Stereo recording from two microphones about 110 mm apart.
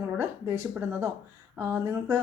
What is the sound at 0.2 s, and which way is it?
Speech, 25° right (ahead or behind).